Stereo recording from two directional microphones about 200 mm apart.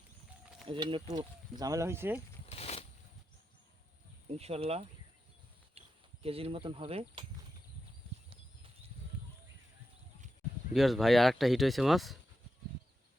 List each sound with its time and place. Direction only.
0.7 s speech: 25° right (ahead or behind)
2.5 s a sound: 30° left (ahead or behind)
4.3 s speech: 30° right (ahead or behind)
6.2 s speech: 30° right (ahead or behind)
10.8 s speech: centre (ahead or behind)